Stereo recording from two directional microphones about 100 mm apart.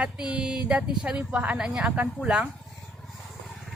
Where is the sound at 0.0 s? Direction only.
10° right (ahead or behind).